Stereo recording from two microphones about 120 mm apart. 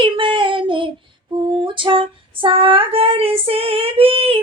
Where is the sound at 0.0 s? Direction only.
45° right (ahead or behind).